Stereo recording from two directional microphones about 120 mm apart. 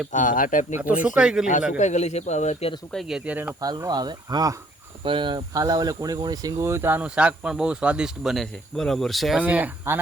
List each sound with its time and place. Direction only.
0.1 s speech: 90° left
0.8 s speech: 15° right (ahead or behind)
1.8 s speech: 75° left (ahead or behind)
2.9 s speech: centre (ahead or behind)
3.6 s speech: 35° right (ahead or behind); by 9.4 s centre (ahead or behind)
9.4 s speech: 10° right (ahead or behind)